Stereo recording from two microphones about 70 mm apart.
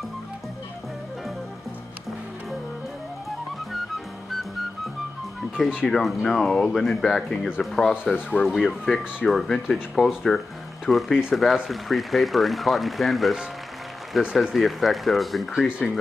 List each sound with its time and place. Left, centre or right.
5.6 s speech: centre
5.9 s speech: centre
8.1 s speech: left
8.5 s speech: centre